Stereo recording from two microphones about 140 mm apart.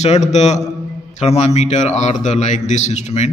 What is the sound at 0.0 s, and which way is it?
A man's voice, 55° left (ahead or behind).